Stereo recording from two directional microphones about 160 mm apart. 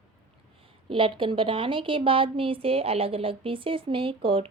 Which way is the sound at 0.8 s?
30° right (ahead or behind).